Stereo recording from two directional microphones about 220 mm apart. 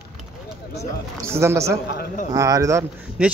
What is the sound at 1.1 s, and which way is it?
Speech, 10° right (ahead or behind).